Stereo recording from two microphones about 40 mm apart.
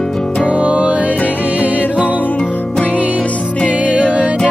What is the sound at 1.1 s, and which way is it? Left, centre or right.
Music, left.